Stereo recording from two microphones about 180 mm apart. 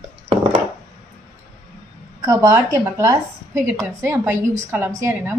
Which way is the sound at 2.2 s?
20° right (ahead or behind).